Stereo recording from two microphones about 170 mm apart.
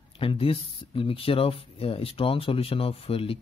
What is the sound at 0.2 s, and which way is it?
Speech, 30° left (ahead or behind).